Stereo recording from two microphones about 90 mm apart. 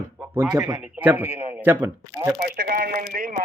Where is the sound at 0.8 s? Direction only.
20° right (ahead or behind).